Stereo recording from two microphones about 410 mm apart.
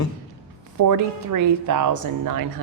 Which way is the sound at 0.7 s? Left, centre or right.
Right.